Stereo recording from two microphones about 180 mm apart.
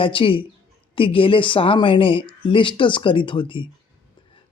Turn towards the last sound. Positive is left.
turn(degrees=30)  # may be behind; listen again after turning